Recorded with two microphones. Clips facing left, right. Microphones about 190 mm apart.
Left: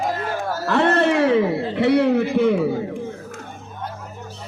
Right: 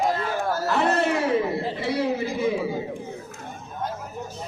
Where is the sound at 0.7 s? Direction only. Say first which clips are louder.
Left 6 dB; 70° left (ahead or behind).